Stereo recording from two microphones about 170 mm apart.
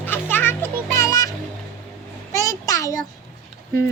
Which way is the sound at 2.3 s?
20° left (ahead or behind).